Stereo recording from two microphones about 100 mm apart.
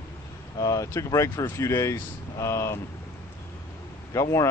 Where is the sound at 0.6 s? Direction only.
35° left (ahead or behind).